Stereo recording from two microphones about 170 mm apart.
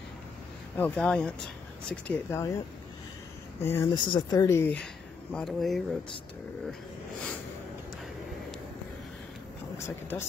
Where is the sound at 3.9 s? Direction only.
25° left (ahead or behind).